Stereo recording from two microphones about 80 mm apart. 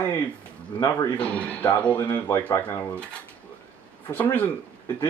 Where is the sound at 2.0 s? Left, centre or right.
Left.